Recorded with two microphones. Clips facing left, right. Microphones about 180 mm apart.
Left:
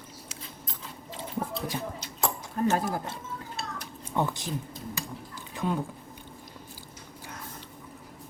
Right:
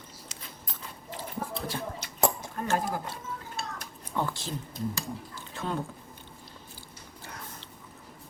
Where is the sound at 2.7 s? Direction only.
20° left (ahead or behind).